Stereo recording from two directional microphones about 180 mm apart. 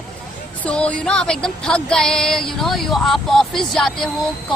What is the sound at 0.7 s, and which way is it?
Music, 5° left (ahead or behind).